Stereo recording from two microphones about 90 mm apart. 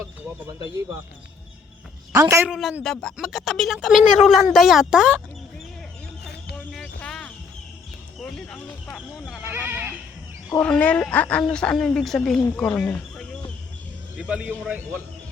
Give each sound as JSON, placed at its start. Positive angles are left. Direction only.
{"t": 2.1, "sound": "a man's voice", "side_deg": -35}
{"t": 2.5, "sound": "speech", "side_deg": 0}
{"t": 7.1, "sound": "a sound", "side_deg": 10}
{"t": 8.2, "sound": "speech", "side_deg": 10}
{"t": 9.0, "sound": "speech", "side_deg": 5}
{"t": 9.4, "sound": "speech", "side_deg": -25}
{"t": 10.6, "sound": "speech", "side_deg": 15}
{"t": 14.2, "sound": "a man's voice", "side_deg": -10}
{"t": 14.7, "sound": "speech", "side_deg": -25}